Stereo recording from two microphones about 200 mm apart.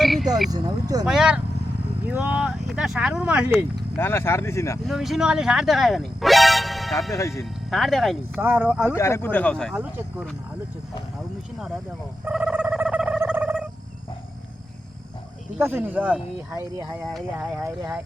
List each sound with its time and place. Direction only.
0.0 s frog: centre (ahead or behind)
0.5 s speech: 20° right (ahead or behind)
1.0 s speech: 5° right (ahead or behind)
3.9 s speech: 10° left (ahead or behind)
4.9 s speech: centre (ahead or behind)
8.9 s speech: 15° left (ahead or behind)
9.7 s speech: 5° right (ahead or behind)
12.2 s a sound: 5° right (ahead or behind)
15.5 s speech: 10° right (ahead or behind)